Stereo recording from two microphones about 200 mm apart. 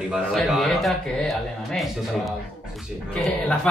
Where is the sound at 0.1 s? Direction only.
Centre (ahead or behind).